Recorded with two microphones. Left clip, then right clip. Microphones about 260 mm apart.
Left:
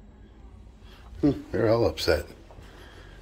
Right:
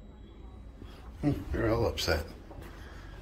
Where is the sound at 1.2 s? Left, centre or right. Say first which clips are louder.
Left 7 dB; left.